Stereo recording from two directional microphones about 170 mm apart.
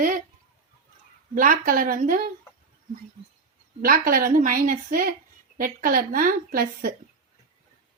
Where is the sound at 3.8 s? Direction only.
60° right (ahead or behind).